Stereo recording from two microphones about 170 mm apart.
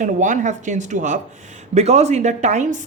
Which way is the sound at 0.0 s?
45° right (ahead or behind).